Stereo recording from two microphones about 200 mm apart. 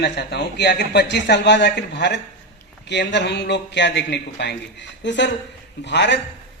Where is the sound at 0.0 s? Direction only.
55° left (ahead or behind).